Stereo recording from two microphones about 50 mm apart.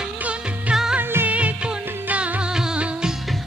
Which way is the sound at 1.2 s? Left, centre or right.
Right.